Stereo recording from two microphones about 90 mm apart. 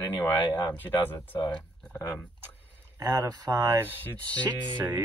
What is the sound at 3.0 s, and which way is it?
Speech, 40° right (ahead or behind).